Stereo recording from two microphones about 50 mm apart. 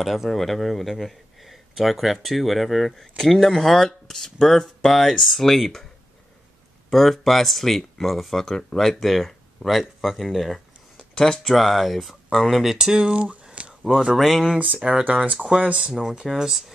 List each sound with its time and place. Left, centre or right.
0.0 s speech: centre
6.9 s speech: centre
11.1 s speech: centre
11.5 s speech: centre; by 13.7 s right
14.1 s speech: centre
14.6 s speech: right
15.3 s speech: centre